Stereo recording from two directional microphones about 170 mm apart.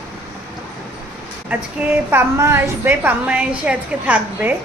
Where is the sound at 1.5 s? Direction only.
10° right (ahead or behind).